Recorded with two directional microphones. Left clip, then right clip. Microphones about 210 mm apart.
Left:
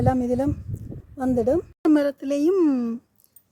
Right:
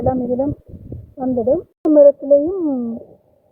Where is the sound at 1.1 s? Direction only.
45° left (ahead or behind).